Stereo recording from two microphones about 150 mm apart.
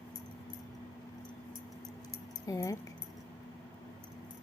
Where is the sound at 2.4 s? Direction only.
20° left (ahead or behind).